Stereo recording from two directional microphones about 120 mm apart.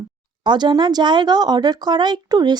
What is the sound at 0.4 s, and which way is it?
Speech, 40° right (ahead or behind).